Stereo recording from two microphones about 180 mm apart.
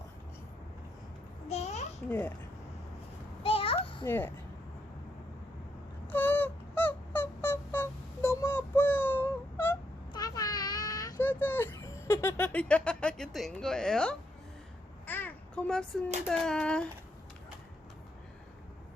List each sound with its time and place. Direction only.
1.5 s babbling: 35° left (ahead or behind)
2.0 s speech: 10° left (ahead or behind)
3.4 s a sound: 30° left (ahead or behind)
4.0 s speech: 10° left (ahead or behind)
6.1 s wail: 10° left (ahead or behind)
10.1 s a sound: 20° left (ahead or behind); by 14.2 s 5° left (ahead or behind)
15.0 s babbling: 10° left (ahead or behind)
16.2 s speech: 5° left (ahead or behind)